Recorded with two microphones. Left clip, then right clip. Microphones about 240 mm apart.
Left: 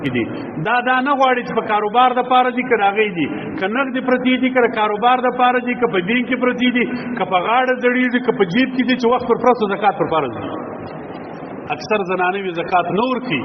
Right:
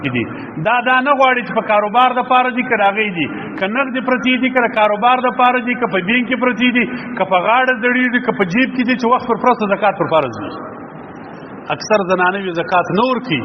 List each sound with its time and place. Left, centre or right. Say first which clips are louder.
0.0 s a man's voice: right 1 dB; right
11.7 s a man's voice: right 5 dB; right